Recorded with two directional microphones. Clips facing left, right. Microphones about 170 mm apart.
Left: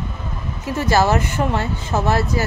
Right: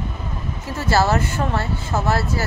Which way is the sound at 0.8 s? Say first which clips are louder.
Left 2 dB; 15° left (ahead or behind).